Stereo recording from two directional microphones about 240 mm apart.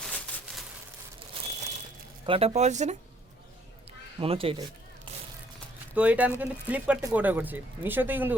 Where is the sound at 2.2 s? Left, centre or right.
Right.